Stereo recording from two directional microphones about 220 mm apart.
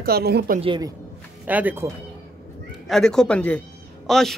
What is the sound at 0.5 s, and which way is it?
Speech, 20° right (ahead or behind).